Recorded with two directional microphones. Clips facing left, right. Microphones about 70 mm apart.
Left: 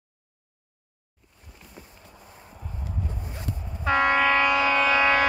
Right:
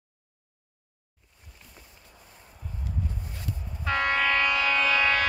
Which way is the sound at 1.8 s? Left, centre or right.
Left.